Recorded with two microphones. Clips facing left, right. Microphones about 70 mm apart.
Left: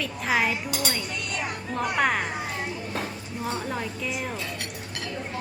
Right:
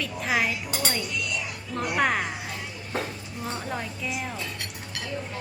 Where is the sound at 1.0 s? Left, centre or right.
Left.